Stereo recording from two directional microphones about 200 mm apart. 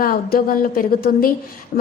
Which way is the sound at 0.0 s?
45° left (ahead or behind).